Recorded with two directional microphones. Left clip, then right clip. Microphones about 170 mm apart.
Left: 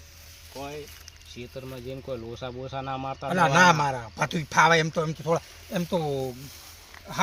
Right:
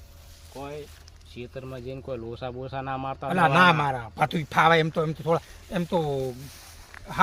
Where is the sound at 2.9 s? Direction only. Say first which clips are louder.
Even; 25° right (ahead or behind); by 5.1 s 45° right (ahead or behind).